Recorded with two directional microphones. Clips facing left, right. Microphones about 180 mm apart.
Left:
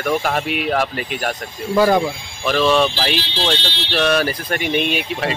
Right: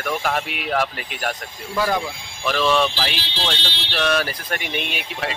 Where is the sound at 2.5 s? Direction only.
20° left (ahead or behind).